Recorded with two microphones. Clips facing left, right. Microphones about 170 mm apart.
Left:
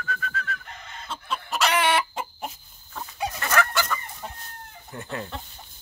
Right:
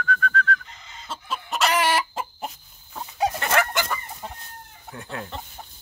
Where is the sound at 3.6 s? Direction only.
20° right (ahead or behind).